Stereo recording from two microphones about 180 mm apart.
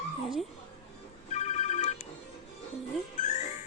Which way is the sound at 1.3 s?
40° left (ahead or behind).